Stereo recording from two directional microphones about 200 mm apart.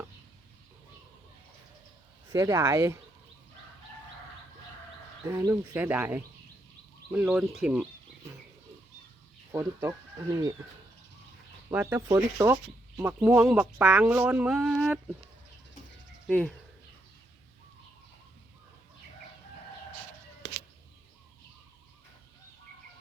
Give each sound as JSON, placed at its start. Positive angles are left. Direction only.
{"t": 2.3, "sound": "speech", "side_deg": -15}
{"t": 5.2, "sound": "speech", "side_deg": -15}
{"t": 9.5, "sound": "speech", "side_deg": -15}
{"t": 11.7, "sound": "speech", "side_deg": -10}
{"t": 16.2, "sound": "speech", "side_deg": 0}